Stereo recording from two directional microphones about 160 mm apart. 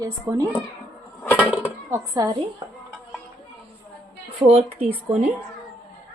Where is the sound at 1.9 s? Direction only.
20° right (ahead or behind).